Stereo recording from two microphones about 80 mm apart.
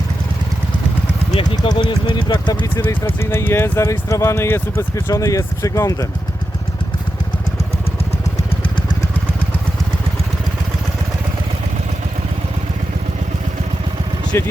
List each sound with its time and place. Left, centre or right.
1.4 s speech: left
2.7 s speech: left
14.3 s speech: left